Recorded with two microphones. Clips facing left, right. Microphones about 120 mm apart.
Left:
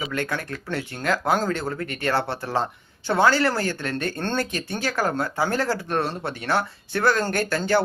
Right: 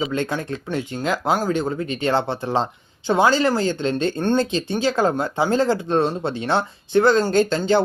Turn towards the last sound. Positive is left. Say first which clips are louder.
# right 5 dB
turn(degrees=-20)  # may be behind; listen again after turning